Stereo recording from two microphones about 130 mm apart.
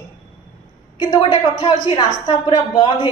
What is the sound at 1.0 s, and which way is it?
Speech, 40° left (ahead or behind).